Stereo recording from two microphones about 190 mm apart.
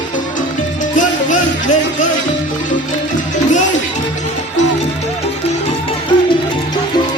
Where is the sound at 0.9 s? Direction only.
40° left (ahead or behind).